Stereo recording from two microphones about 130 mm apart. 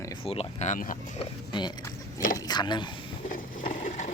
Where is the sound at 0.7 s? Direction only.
90° left.